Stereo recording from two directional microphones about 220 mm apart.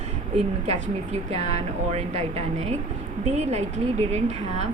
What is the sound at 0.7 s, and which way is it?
A woman's voice, 30° right (ahead or behind).